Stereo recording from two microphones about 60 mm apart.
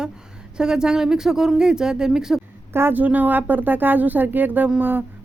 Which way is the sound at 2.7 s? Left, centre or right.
Right.